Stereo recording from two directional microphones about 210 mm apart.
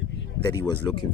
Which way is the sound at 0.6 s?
20° left (ahead or behind).